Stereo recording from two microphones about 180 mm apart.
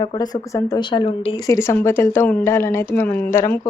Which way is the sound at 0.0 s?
25° left (ahead or behind).